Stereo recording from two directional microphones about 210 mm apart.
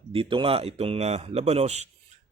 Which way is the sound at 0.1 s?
25° right (ahead or behind).